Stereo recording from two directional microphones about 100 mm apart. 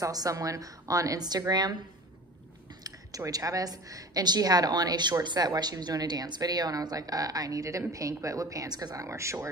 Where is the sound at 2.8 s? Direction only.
35° right (ahead or behind).